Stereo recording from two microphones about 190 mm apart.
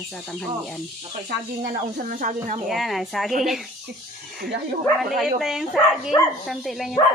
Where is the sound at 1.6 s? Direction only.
50° right (ahead or behind).